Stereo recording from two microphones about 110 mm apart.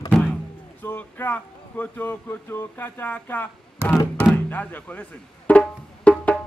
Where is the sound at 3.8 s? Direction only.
20° right (ahead or behind).